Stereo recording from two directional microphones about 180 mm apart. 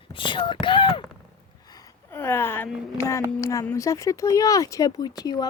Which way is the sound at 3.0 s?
15° left (ahead or behind).